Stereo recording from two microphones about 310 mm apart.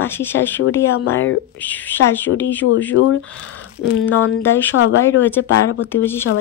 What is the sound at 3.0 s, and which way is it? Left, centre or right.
Speech, left.